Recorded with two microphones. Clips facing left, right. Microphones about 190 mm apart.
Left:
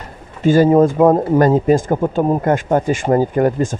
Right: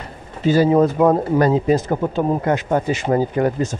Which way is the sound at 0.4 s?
50° left (ahead or behind).